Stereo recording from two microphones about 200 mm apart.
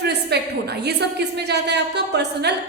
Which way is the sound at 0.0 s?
55° right (ahead or behind).